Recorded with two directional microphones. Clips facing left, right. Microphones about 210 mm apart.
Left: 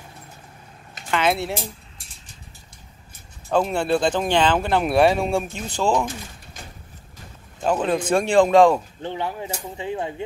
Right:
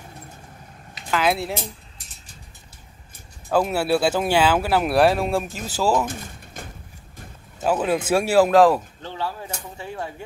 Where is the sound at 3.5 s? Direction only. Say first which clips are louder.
Even; 5° right (ahead or behind).